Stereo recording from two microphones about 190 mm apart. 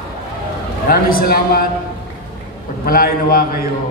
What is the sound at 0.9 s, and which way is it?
Speech, 50° left (ahead or behind).